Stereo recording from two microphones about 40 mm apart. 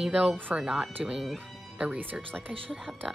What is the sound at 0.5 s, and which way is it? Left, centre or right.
Music, right.